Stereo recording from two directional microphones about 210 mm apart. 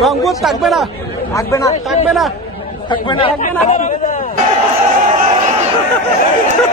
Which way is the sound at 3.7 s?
35° left (ahead or behind).